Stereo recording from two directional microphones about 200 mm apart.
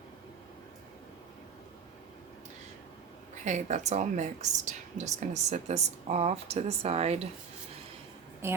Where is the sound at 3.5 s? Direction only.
35° right (ahead or behind).